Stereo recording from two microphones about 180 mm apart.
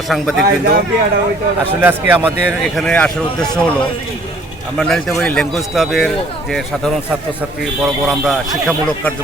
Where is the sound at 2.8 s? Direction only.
5° left (ahead or behind).